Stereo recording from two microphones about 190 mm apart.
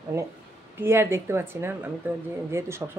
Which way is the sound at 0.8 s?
15° right (ahead or behind).